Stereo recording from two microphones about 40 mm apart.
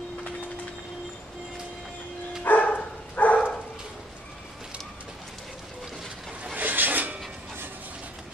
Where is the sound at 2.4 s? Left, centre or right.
Left.